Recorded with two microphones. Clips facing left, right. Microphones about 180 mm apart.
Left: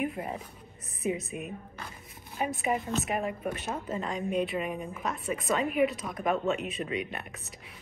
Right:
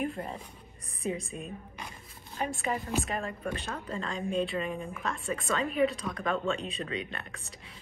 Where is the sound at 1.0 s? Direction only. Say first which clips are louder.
Left 2 dB; 20° left (ahead or behind).